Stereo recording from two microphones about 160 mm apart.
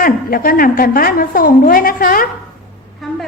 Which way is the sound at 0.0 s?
65° left (ahead or behind).